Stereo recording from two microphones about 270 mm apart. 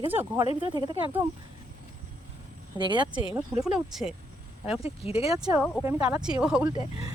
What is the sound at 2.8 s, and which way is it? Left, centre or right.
Speech, centre.